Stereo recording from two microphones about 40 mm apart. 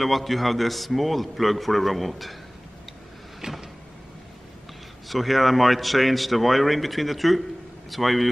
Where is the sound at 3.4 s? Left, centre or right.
Centre.